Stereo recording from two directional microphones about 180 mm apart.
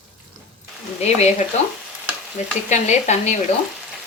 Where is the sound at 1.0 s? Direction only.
35° left (ahead or behind).